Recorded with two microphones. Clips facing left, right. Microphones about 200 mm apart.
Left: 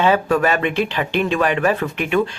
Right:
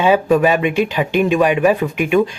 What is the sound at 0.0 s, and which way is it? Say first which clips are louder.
Speech: right 3 dB; 15° right (ahead or behind).